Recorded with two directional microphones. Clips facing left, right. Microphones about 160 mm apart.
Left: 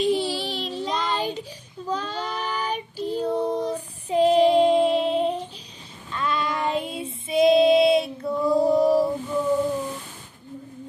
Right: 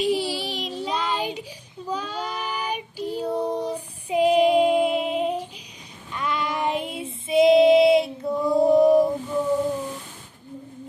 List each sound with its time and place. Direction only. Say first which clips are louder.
0.0 s child singing: left 1 dB; 10° right (ahead or behind)
6.1 s child singing: left 1 dB; 20° right (ahead or behind)